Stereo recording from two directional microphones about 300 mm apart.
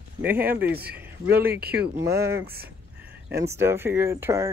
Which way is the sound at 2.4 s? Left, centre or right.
Right.